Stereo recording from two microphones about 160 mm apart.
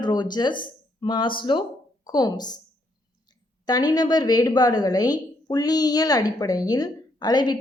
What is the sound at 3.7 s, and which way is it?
A woman's voice, 25° left (ahead or behind).